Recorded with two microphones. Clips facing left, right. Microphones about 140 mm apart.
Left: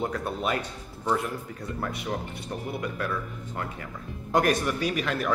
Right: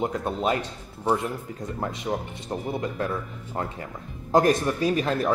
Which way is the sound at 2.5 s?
30° right (ahead or behind).